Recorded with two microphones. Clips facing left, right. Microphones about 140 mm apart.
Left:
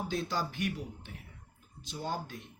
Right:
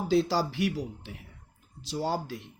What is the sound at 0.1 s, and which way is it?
Speech, 90° right.